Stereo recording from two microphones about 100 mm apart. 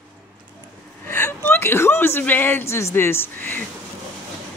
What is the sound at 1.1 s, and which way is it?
A woman's voice, 25° left (ahead or behind).